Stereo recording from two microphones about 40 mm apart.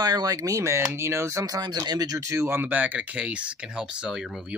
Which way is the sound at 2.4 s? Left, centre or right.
Right.